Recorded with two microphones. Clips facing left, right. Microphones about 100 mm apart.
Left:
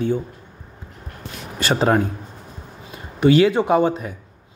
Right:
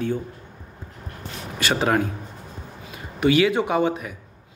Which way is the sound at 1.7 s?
30° left (ahead or behind).